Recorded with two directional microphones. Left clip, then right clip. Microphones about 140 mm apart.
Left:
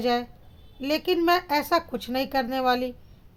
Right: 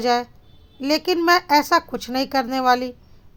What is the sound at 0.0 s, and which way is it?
A woman's voice, 25° right (ahead or behind).